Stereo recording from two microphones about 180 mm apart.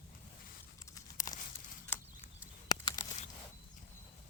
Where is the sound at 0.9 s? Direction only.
20° left (ahead or behind).